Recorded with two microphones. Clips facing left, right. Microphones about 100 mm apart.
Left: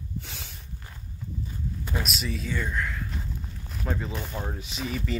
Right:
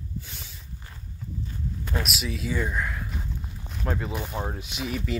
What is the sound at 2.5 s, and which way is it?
Speech, 15° right (ahead or behind).